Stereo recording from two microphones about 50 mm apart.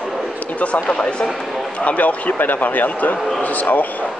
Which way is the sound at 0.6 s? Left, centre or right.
Left.